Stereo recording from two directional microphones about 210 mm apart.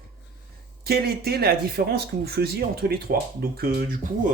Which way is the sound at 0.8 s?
45° right (ahead or behind).